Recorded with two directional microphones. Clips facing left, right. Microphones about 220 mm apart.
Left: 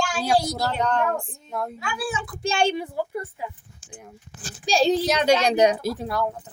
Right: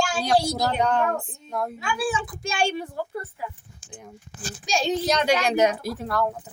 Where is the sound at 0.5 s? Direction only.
15° right (ahead or behind).